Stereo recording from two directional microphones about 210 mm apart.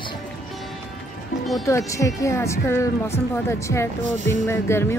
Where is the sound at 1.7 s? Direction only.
15° left (ahead or behind).